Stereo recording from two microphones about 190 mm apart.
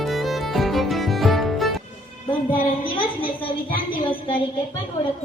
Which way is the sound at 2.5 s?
25° left (ahead or behind).